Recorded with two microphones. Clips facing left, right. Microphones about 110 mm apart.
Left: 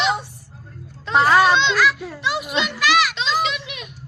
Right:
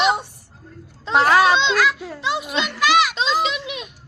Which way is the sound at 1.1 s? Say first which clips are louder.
Even; centre (ahead or behind).